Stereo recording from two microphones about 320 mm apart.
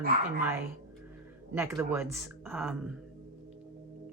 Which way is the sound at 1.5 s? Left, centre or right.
Centre.